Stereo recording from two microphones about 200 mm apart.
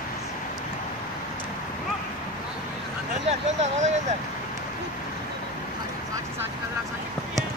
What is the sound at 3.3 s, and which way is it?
Vehicle, 35° right (ahead or behind).